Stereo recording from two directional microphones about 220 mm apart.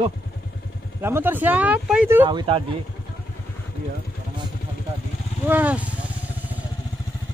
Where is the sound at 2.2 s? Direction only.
20° right (ahead or behind).